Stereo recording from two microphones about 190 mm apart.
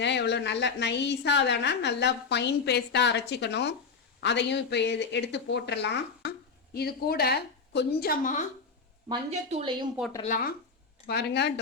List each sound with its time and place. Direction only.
0.0 s a woman's voice: 65° left (ahead or behind); by 8.4 s 40° left (ahead or behind)
9.5 s a woman's voice: 35° right (ahead or behind)
10.2 s speech: 45° left (ahead or behind)
11.0 s a woman's voice: 60° left (ahead or behind)